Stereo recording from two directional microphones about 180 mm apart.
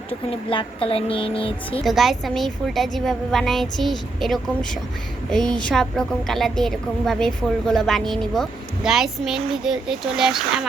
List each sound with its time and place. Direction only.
0.3 s speech: 30° left (ahead or behind)
1.8 s a woman's voice: centre (ahead or behind)